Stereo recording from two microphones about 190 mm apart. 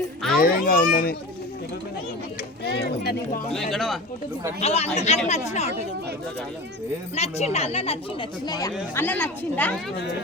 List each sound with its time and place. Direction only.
0.3 s a child's voice: 50° left (ahead or behind)
2.6 s speech: 60° left (ahead or behind)
3.5 s speech: centre (ahead or behind)
4.6 s speech: 35° left (ahead or behind)
7.2 s speech: 35° left (ahead or behind)
8.4 s speech: 20° left (ahead or behind)
9.0 s speech: 10° left (ahead or behind)